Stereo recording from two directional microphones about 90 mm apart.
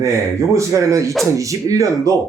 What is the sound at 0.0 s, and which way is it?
Speech, 35° right (ahead or behind).